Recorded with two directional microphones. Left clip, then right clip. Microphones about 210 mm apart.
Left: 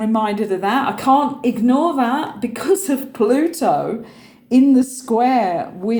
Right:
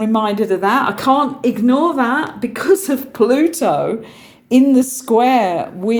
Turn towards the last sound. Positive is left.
turn(degrees=-55)  # may be behind; listen again after turning